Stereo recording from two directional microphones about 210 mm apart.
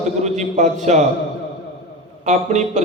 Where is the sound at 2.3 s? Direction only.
35° right (ahead or behind).